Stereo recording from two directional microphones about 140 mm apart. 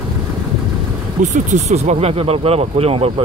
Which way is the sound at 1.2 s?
60° right (ahead or behind).